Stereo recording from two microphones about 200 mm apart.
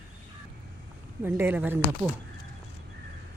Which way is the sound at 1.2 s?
10° right (ahead or behind).